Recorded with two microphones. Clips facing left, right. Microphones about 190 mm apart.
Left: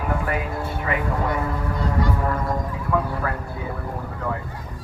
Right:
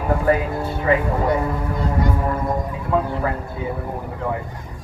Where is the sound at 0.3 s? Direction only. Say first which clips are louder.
Right 7 dB; 30° right (ahead or behind).